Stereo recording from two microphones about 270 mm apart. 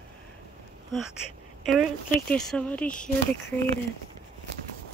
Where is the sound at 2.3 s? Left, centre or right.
Centre.